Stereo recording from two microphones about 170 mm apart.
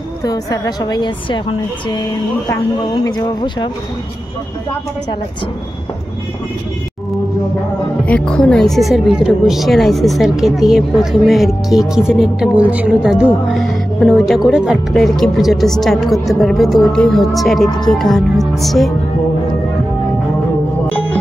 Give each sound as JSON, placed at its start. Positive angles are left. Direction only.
{"t": 0.2, "sound": "a woman's voice", "side_deg": 20}
{"t": 8.0, "sound": "speech", "side_deg": 5}